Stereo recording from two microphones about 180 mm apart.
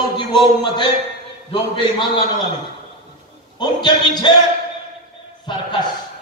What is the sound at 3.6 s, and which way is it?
Speech, 25° left (ahead or behind).